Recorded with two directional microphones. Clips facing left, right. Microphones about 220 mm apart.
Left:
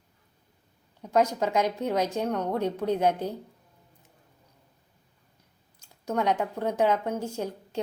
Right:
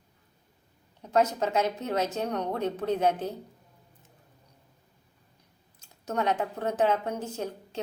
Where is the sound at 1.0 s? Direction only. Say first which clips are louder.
Left 1 dB; 10° left (ahead or behind).